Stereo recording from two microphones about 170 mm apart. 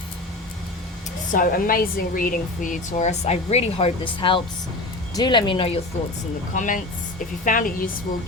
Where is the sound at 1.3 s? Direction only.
55° left (ahead or behind); by 5.8 s 35° left (ahead or behind).